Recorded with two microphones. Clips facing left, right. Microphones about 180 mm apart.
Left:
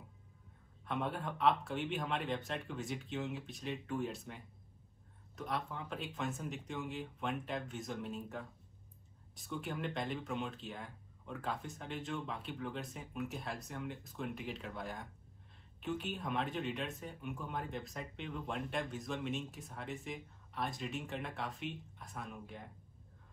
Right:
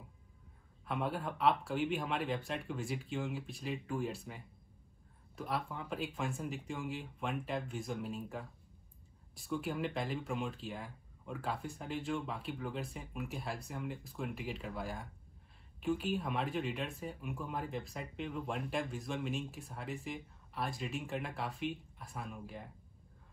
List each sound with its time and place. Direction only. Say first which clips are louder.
0.8 s speech: right 1 dB; 5° right (ahead or behind)
5.4 s speech: right 1 dB; 5° right (ahead or behind)